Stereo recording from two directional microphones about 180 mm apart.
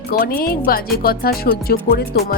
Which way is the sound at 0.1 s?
55° left (ahead or behind).